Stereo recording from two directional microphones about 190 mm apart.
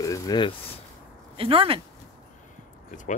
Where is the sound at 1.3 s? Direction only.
30° right (ahead or behind).